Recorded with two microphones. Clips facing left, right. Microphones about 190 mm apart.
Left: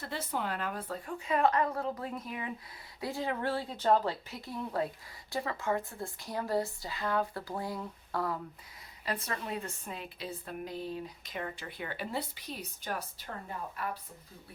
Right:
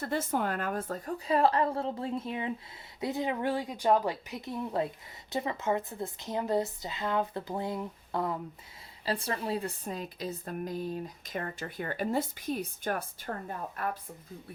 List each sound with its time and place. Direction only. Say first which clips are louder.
0.0 s a woman's voice: right 6 dB; 50° right (ahead or behind)